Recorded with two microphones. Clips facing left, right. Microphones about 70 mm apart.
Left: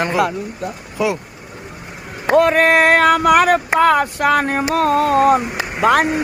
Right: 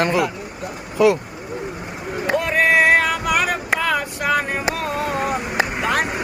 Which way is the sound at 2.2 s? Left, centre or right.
Left.